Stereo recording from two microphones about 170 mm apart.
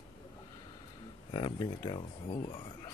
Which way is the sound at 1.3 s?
30° left (ahead or behind).